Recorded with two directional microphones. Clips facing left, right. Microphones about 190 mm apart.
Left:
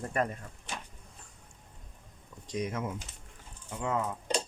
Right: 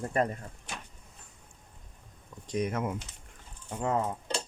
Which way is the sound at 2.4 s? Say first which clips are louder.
Right 3 dB; 55° right (ahead or behind).